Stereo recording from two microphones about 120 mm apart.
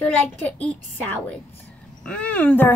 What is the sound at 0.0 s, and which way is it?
A child's voice, 15° left (ahead or behind).